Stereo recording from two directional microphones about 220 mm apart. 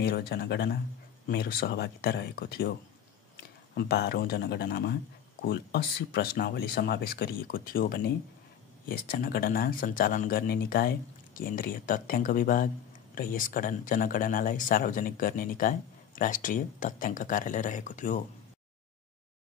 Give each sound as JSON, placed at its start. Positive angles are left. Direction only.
{"t": 0.0, "sound": "speech", "side_deg": 45}
{"t": 3.7, "sound": "speech", "side_deg": 45}